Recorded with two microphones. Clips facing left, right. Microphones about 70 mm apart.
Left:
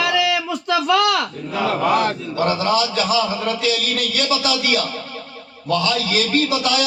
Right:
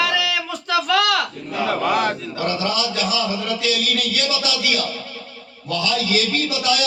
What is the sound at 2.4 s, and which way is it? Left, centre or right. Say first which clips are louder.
A man's voice: left 5 dB; left.